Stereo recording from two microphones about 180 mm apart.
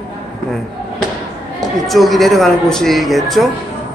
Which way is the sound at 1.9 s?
Centre (ahead or behind).